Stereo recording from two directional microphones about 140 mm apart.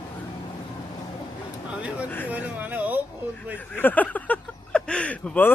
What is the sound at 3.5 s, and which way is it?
Speech, 15° left (ahead or behind).